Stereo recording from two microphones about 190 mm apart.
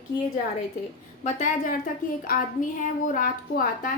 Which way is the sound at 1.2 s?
40° left (ahead or behind).